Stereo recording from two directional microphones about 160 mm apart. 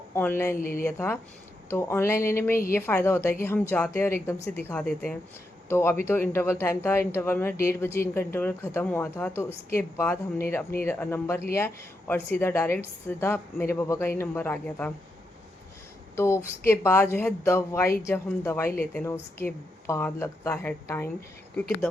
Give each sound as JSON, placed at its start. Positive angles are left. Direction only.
{"t": 0.1, "sound": "speech", "side_deg": 15}
{"t": 0.5, "sound": "speech", "side_deg": 60}
{"t": 0.9, "sound": "a woman's voice", "side_deg": 15}
{"t": 16.1, "sound": "a woman's voice", "side_deg": 15}